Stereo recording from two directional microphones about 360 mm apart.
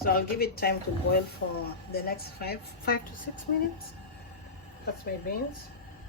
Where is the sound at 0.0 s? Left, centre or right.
Left.